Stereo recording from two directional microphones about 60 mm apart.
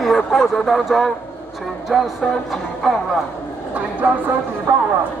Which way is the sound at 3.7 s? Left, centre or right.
Right.